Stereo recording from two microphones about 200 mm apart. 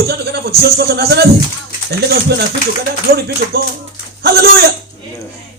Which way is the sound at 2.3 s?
55° right (ahead or behind).